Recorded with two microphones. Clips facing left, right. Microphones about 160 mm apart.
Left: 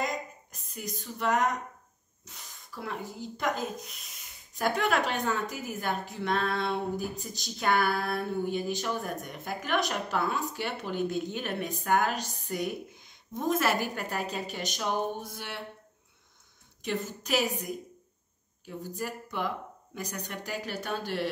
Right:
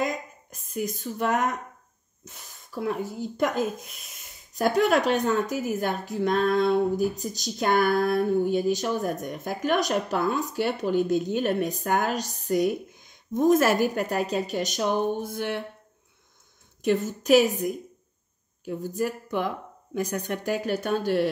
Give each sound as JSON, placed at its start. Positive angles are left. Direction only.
{"t": 0.0, "sound": "a sound", "side_deg": -50}
{"t": 2.2, "sound": "speech", "side_deg": -45}
{"t": 4.6, "sound": "a woman's voice", "side_deg": -45}
{"t": 16.8, "sound": "a woman's voice", "side_deg": -50}
{"t": 18.8, "sound": "a woman's voice", "side_deg": -50}